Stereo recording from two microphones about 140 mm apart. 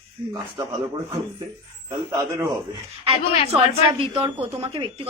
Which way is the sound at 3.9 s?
40° right (ahead or behind).